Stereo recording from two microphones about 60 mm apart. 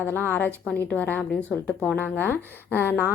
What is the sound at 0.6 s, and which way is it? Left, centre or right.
A woman's voice, centre.